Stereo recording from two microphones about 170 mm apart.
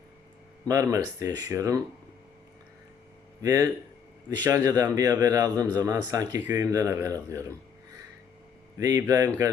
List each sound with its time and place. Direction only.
0.7 s a man's voice: 20° right (ahead or behind)
3.4 s a man's voice: 20° right (ahead or behind)
8.8 s a man's voice: 20° right (ahead or behind)